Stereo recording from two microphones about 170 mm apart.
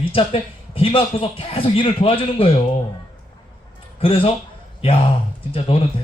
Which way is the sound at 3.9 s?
35° left (ahead or behind).